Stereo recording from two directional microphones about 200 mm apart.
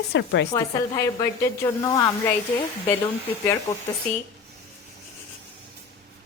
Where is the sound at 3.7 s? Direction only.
20° left (ahead or behind).